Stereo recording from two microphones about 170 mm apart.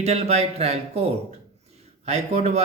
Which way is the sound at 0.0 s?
40° right (ahead or behind).